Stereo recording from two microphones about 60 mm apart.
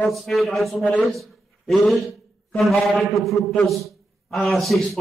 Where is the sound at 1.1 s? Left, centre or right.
Centre.